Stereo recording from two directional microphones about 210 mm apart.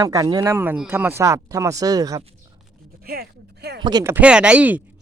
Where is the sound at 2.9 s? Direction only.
45° right (ahead or behind).